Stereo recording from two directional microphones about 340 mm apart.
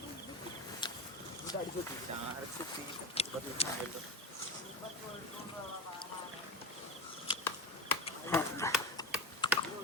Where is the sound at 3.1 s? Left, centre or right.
Centre.